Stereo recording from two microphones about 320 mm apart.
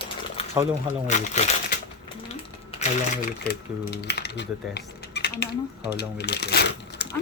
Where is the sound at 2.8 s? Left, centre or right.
Left.